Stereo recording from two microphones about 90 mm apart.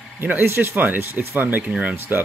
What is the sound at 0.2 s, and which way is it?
Speech, 25° right (ahead or behind).